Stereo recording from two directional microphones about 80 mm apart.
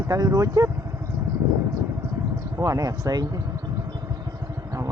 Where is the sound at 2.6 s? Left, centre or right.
Right.